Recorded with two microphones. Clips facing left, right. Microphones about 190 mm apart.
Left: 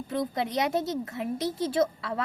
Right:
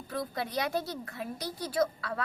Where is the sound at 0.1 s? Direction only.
20° left (ahead or behind).